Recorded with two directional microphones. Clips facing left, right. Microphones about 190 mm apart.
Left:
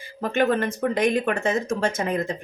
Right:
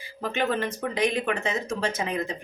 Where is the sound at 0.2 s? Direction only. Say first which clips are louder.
Left 5 dB; 50° left (ahead or behind).